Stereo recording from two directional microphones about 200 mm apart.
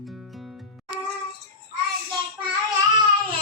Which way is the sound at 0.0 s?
Centre (ahead or behind).